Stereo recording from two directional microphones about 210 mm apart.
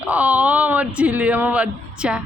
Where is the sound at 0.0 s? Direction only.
5° right (ahead or behind).